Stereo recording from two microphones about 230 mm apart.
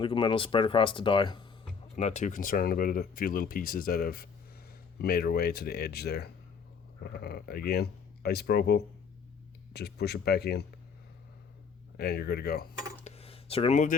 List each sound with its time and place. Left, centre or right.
0.0 s speech: left
2.0 s speech: left
11.9 s speech: left
13.1 s a sound: left